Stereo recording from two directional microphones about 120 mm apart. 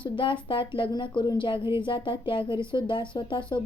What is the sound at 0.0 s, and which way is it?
A woman's voice, 45° left (ahead or behind).